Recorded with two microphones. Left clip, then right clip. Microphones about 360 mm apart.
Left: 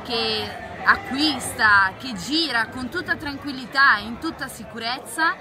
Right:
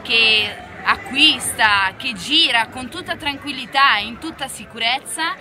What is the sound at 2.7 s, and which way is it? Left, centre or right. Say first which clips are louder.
Speech: even; right.